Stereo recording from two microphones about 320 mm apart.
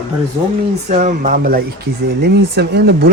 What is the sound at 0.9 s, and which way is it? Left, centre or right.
A man's voice, right.